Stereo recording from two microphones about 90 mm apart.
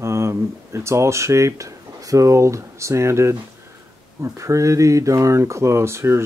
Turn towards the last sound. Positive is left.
turn(degrees=-30)  # may be behind; listen again after turning